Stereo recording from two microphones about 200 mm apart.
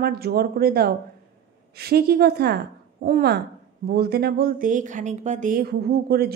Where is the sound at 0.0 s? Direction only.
50° right (ahead or behind).